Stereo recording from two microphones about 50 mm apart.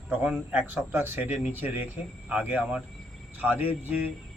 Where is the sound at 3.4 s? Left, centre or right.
Right.